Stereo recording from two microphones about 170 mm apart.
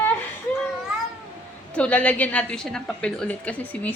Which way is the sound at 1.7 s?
5° left (ahead or behind).